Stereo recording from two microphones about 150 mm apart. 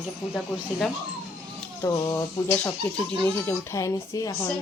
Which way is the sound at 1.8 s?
20° left (ahead or behind).